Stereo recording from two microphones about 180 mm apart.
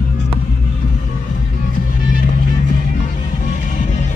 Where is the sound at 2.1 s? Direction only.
45° left (ahead or behind).